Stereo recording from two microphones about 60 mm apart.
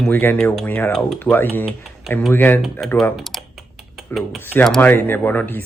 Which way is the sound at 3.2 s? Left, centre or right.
Centre.